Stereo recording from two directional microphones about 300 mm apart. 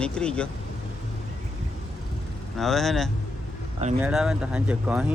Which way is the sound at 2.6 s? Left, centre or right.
Centre.